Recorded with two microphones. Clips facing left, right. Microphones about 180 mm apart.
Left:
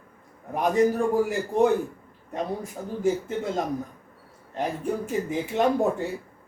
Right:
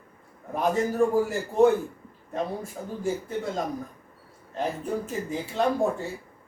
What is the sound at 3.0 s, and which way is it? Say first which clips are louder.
Speech: left 4 dB; 20° left (ahead or behind).